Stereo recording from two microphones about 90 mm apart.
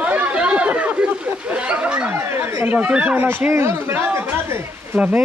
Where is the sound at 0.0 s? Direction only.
15° right (ahead or behind).